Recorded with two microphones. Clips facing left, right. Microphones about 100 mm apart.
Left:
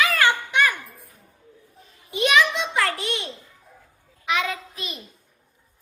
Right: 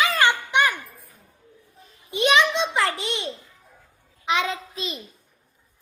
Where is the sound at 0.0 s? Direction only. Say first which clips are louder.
Even; 20° right (ahead or behind).